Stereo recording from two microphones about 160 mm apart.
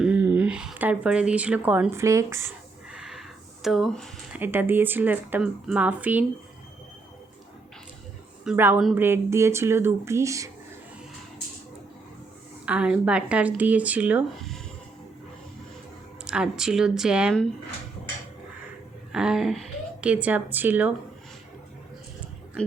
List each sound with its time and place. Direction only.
0.0 s speech: 10° right (ahead or behind)
2.9 s a sound: 5° right (ahead or behind)
4.3 s speech: 10° right (ahead or behind)
8.4 s speech: 10° right (ahead or behind)
12.6 s speech: 5° right (ahead or behind)
16.2 s a woman's voice: 5° right (ahead or behind)
19.1 s a woman's voice: 5° right (ahead or behind)